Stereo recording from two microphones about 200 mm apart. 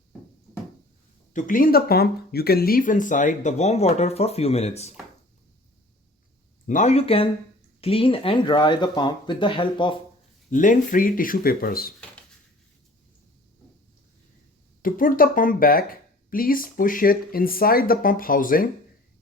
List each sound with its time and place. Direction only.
1.3 s speech: 40° left (ahead or behind)
6.7 s speech: 35° left (ahead or behind)
10.5 s speech: 40° left (ahead or behind)
14.8 s speech: 45° left (ahead or behind)